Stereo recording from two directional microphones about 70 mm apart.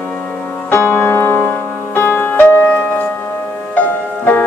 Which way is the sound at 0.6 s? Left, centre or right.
Left.